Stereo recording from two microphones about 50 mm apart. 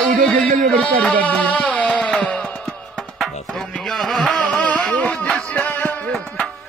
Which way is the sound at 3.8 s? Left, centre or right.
Centre.